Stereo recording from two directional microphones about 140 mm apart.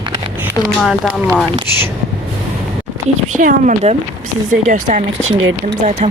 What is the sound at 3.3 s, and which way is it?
Speech, 65° right (ahead or behind).